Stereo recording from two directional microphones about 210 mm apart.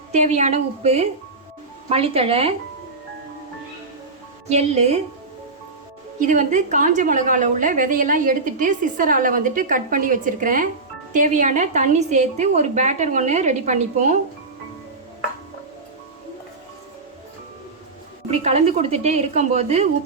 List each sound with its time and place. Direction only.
0.1 s a woman's voice: 35° right (ahead or behind)
4.4 s a woman's voice: 30° right (ahead or behind)
6.1 s a woman's voice: 35° right (ahead or behind)
18.3 s a woman's voice: 30° right (ahead or behind)